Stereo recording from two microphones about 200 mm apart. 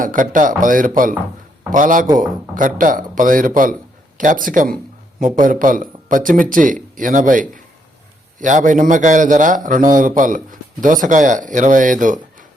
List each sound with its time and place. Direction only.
0.0 s speech: 40° right (ahead or behind)